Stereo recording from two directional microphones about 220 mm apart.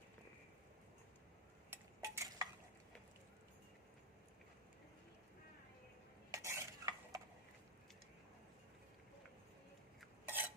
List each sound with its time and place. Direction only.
1.7 s a sound: 15° right (ahead or behind)
6.3 s stir: 15° right (ahead or behind)
10.0 s dishes: 10° right (ahead or behind)